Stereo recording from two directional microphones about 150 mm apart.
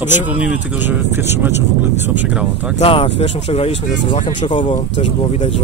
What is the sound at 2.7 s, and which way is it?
Speech, 40° left (ahead or behind).